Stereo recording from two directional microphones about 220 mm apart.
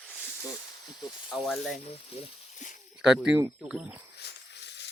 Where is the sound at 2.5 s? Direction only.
35° left (ahead or behind).